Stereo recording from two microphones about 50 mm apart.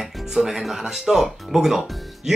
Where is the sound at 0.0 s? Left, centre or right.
Centre.